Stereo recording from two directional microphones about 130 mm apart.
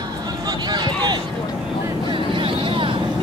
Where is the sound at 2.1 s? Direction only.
40° right (ahead or behind).